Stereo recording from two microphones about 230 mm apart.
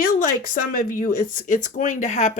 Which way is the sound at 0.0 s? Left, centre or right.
Left.